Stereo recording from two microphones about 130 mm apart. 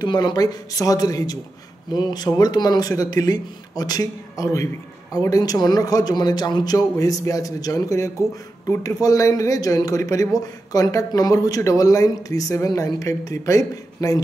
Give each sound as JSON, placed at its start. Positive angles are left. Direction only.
{"t": 0.0, "sound": "speech", "side_deg": 35}